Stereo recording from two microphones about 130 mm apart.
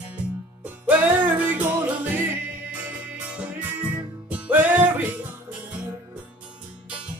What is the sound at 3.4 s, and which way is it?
Music, 10° right (ahead or behind).